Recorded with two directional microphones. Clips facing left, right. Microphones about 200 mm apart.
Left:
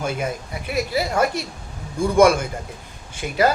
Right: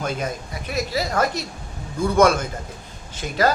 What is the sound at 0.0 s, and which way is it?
A man's voice, 10° left (ahead or behind).